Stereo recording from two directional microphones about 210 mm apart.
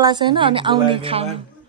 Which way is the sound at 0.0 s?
20° right (ahead or behind).